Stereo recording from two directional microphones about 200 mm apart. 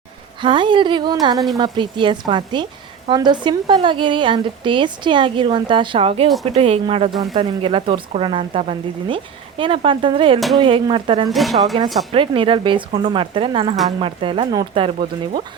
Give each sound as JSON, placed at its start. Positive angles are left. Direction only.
{"t": 0.4, "sound": "speech", "side_deg": -25}
{"t": 11.3, "sound": "a woman's voice", "side_deg": 0}
{"t": 11.7, "sound": "speech", "side_deg": -30}